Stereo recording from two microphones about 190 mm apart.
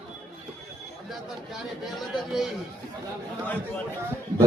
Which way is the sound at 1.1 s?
Centre (ahead or behind).